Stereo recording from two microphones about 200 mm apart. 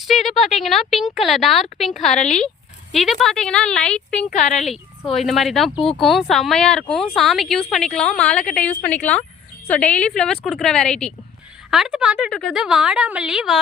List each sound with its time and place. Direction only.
0.0 s speech: centre (ahead or behind)
4.3 s speech: 35° left (ahead or behind)
4.5 s speech: centre (ahead or behind)